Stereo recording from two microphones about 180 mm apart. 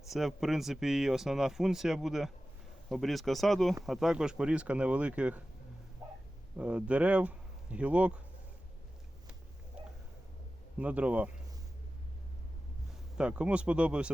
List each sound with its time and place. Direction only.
0.1 s speech: centre (ahead or behind)
6.6 s speech: 5° right (ahead or behind)
10.8 s speech: 10° right (ahead or behind)
13.1 s speech: 5° right (ahead or behind)